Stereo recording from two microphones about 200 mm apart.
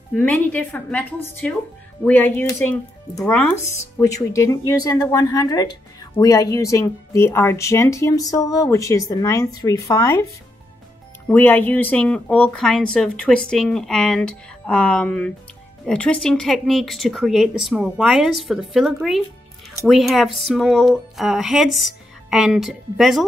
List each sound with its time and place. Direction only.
0.1 s speech: 5° left (ahead or behind)
11.2 s speech: 10° left (ahead or behind)